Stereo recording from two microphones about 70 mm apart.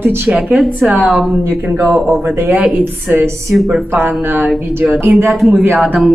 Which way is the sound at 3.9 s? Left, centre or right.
Right.